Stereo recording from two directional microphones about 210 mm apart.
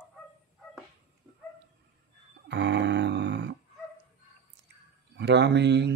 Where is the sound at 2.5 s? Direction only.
55° right (ahead or behind).